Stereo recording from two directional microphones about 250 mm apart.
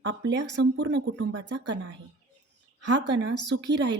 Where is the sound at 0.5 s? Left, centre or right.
Right.